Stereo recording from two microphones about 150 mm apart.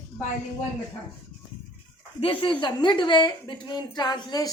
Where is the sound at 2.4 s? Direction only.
35° left (ahead or behind).